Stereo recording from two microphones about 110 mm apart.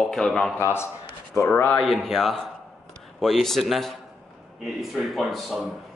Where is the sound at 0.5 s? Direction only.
25° left (ahead or behind).